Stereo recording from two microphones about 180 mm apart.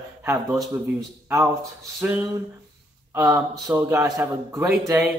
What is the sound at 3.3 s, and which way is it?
Speech, 10° right (ahead or behind).